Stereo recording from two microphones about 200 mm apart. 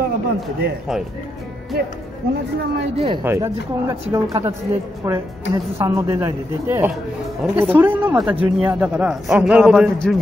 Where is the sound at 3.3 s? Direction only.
15° right (ahead or behind).